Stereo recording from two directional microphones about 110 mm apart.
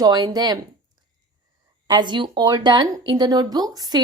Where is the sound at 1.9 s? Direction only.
45° right (ahead or behind).